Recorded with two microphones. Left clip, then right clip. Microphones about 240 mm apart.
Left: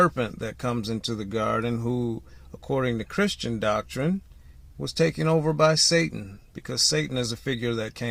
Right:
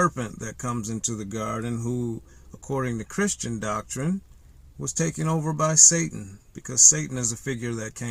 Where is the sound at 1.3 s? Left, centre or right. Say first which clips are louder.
Left 7 dB; right.